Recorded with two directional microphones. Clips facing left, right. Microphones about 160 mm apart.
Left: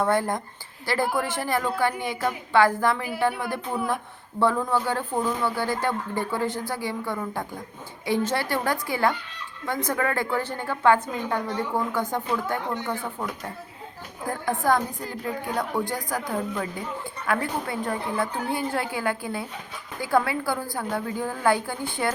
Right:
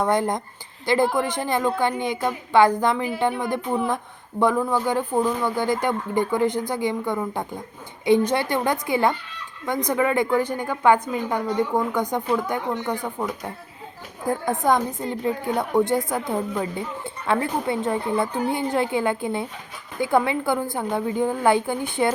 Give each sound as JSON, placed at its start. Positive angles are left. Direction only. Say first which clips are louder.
{"t": 0.0, "sound": "a woman's voice", "louder": "right 2 dB", "side_deg": -20}
{"t": 14.4, "sound": "a woman's voice", "louder": "right 1 dB", "side_deg": -20}